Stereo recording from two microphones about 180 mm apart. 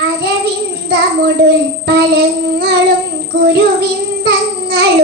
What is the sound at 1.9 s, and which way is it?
Child singing, 65° right (ahead or behind).